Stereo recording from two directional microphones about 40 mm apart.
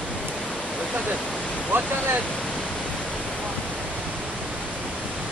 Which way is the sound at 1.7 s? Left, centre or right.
Right.